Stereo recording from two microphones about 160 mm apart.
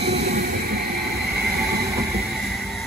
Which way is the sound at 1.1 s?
85° right.